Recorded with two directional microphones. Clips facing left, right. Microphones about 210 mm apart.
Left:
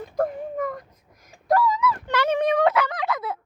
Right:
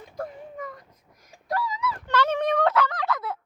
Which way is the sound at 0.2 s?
50° left (ahead or behind).